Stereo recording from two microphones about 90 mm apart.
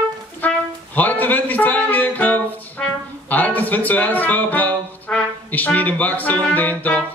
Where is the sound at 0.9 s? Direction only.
20° left (ahead or behind).